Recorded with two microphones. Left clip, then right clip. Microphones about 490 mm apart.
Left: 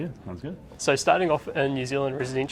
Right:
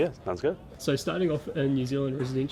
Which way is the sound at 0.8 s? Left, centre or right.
Left.